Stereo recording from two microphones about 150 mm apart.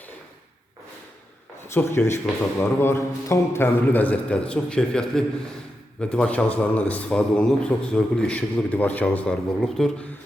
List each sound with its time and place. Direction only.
1.7 s a man's voice: 15° left (ahead or behind)